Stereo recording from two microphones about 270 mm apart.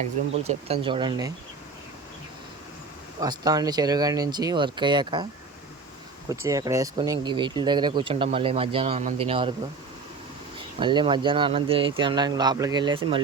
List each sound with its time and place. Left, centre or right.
0.0 s speech: right
3.2 s speech: centre
6.2 s speech: centre
10.8 s speech: centre